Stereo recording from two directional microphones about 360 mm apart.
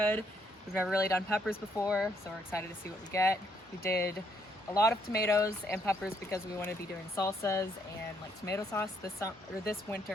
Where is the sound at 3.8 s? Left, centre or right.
Left.